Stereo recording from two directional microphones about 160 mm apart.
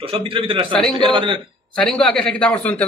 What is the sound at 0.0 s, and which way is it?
A man's voice, 35° right (ahead or behind).